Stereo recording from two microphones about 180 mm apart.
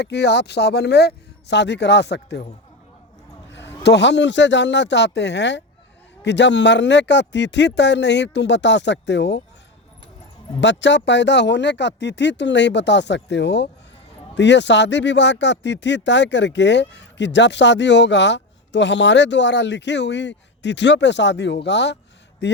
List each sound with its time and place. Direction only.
0.0 s speech: 70° left (ahead or behind)
3.8 s speech: 75° left (ahead or behind)
10.6 s speech: 90° left; by 22.6 s 75° left (ahead or behind)